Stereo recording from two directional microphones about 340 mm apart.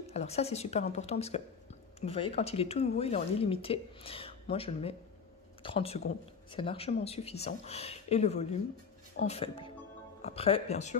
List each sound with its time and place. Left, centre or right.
0.1 s a woman's voice: centre